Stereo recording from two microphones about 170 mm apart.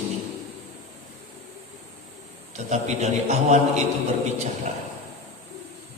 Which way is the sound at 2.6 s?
45° right (ahead or behind).